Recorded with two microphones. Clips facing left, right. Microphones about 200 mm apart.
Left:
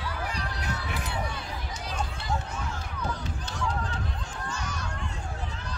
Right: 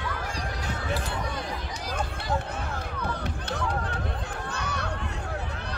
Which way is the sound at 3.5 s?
60° right (ahead or behind).